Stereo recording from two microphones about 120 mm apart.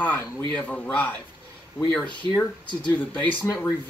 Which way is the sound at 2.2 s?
45° right (ahead or behind).